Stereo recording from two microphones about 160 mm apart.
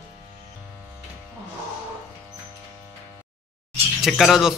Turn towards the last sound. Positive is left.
turn(degrees=0)  # may be behind; listen again after turning